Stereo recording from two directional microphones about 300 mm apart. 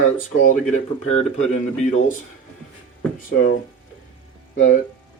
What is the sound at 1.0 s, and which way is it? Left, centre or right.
Speech, left.